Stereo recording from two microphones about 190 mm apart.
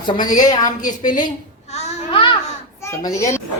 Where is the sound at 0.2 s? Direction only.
45° left (ahead or behind).